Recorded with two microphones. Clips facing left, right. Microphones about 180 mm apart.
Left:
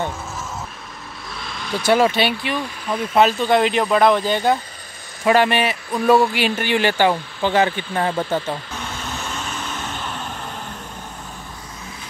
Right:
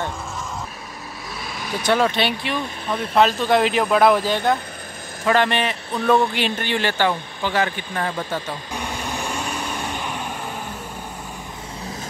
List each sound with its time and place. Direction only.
1.4 s vehicle: 10° right (ahead or behind)
1.9 s speech: 10° left (ahead or behind)
5.2 s a man's voice: 10° left (ahead or behind)
8.7 s vehicle: 15° right (ahead or behind)